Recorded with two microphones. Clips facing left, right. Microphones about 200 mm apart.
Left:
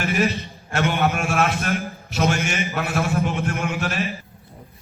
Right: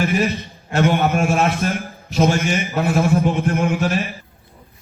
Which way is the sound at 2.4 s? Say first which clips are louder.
Right 4 dB; centre (ahead or behind).